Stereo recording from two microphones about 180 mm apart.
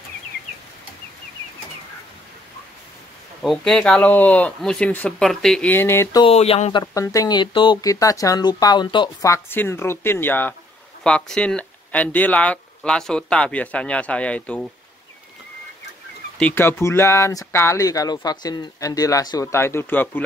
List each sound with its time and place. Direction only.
3.4 s speech: centre (ahead or behind)
6.2 s speech: 35° left (ahead or behind)
6.8 s speech: 20° left (ahead or behind)
16.3 s speech: 10° left (ahead or behind)